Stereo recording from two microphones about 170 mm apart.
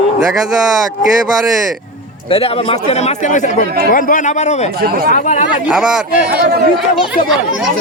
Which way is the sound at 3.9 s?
50° left (ahead or behind).